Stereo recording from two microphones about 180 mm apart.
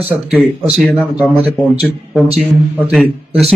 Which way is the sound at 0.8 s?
Centre (ahead or behind).